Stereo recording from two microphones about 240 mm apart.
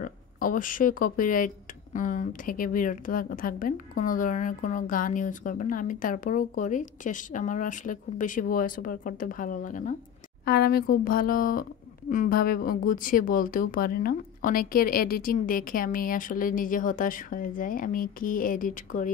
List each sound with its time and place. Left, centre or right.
0.0 s a woman's voice: left